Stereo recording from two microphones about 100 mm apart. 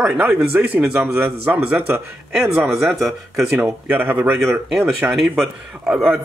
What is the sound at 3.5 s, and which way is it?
Speech, 15° right (ahead or behind).